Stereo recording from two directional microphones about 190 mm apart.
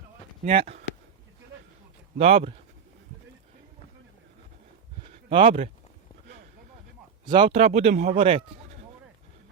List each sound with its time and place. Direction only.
0.4 s speech: 30° right (ahead or behind)
2.1 s speech: 30° right (ahead or behind)
5.0 s a sound: 30° right (ahead or behind)
7.3 s speech: 25° right (ahead or behind)